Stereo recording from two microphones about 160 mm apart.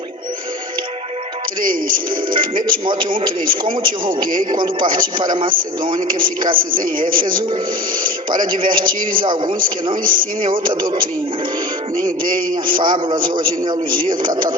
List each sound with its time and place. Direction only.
2.6 s a man's voice: 30° right (ahead or behind)
4.5 s a man's voice: 30° right (ahead or behind)
6.5 s a man's voice: 60° right (ahead or behind)
8.4 s a man's voice: 30° right (ahead or behind)
8.8 s a man's voice: 60° right (ahead or behind)
9.2 s a man's voice: 30° right (ahead or behind)
10.0 s a man's voice: 60° right (ahead or behind)
10.6 s a man's voice: 30° right (ahead or behind)
12.7 s a man's voice: 30° right (ahead or behind)